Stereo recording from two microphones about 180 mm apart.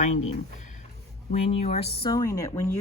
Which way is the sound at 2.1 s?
20° left (ahead or behind).